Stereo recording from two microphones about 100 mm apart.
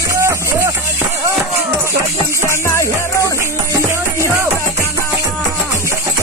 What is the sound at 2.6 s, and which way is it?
Music, 30° left (ahead or behind).